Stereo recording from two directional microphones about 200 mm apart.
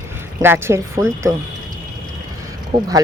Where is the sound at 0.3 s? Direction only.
10° right (ahead or behind).